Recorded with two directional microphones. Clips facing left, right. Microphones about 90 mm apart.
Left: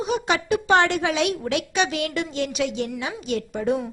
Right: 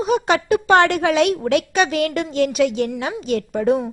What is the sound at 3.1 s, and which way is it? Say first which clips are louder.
Speech: right 5 dB; 40° right (ahead or behind).